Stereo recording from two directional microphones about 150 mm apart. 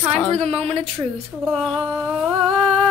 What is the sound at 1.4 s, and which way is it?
Speech, centre (ahead or behind).